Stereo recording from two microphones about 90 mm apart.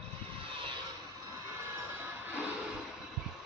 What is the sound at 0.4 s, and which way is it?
Vehicle, 75° right (ahead or behind).